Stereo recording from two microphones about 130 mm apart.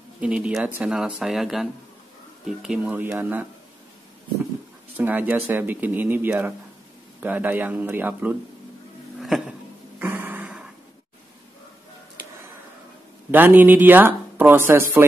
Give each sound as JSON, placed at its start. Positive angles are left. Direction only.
{"t": 0.2, "sound": "speech", "side_deg": -10}
{"t": 4.9, "sound": "speech", "side_deg": -15}
{"t": 9.2, "sound": "a sound", "side_deg": 0}
{"t": 9.9, "sound": "music", "side_deg": -15}
{"t": 13.3, "sound": "speech", "side_deg": -15}